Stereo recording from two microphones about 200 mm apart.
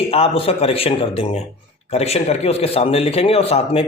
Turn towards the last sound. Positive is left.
turn(degrees=30)  # may be behind; listen again after turning